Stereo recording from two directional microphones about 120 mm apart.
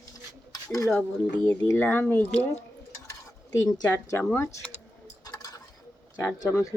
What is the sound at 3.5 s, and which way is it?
Speech, 30° left (ahead or behind).